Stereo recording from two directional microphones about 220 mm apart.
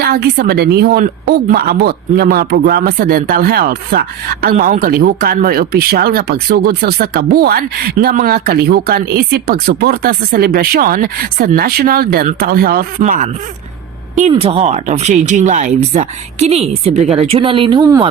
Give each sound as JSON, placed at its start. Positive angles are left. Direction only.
{"t": 0.0, "sound": "speech", "side_deg": -45}